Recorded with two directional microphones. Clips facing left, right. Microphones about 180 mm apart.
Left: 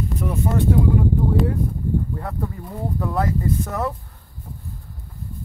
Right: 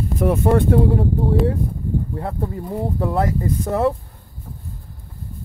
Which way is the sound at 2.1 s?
25° right (ahead or behind).